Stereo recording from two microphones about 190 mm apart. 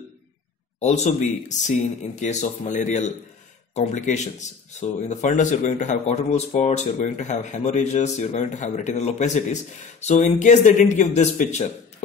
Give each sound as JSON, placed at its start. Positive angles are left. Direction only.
{"t": 0.7, "sound": "a man's voice", "side_deg": 35}